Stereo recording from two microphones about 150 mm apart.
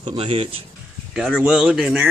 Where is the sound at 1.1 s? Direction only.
5° right (ahead or behind).